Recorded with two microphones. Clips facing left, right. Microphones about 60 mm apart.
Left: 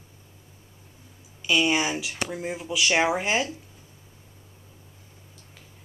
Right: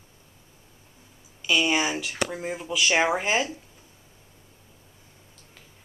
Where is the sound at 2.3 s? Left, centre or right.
Centre.